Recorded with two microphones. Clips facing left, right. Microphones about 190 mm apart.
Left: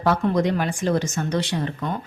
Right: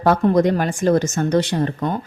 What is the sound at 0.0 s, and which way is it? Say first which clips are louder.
Speech: right 5 dB; 45° right (ahead or behind).